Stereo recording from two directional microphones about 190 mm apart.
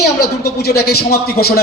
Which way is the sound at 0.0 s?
55° left (ahead or behind).